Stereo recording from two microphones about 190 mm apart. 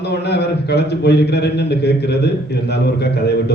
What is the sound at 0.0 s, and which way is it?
A man's voice, 60° left (ahead or behind).